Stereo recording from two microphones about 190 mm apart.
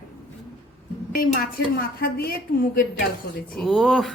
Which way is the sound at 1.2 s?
50° left (ahead or behind).